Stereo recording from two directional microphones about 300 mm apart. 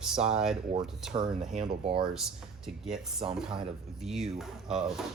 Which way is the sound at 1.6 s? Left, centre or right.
Centre.